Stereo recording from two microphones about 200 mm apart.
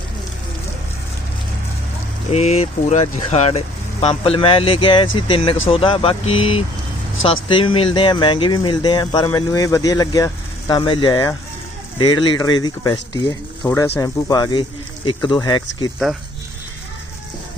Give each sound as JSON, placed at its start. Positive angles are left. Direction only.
{"t": 2.3, "sound": "speech", "side_deg": 35}